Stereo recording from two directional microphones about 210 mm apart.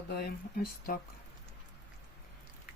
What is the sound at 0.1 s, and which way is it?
Speech, 50° left (ahead or behind).